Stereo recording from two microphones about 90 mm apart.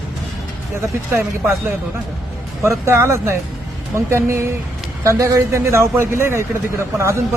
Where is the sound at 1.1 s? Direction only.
25° right (ahead or behind).